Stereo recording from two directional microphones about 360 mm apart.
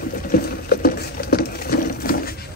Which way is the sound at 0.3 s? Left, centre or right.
Left.